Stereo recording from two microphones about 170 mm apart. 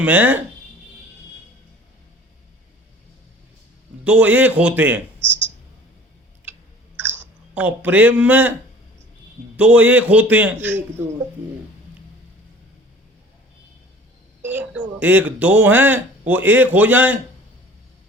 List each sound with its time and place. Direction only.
0.0 s speech: 10° right (ahead or behind)
4.0 s speech: 10° right (ahead or behind)
6.9 s chewing: 10° right (ahead or behind)
9.6 s speech: 5° right (ahead or behind)
14.4 s speech: 10° right (ahead or behind)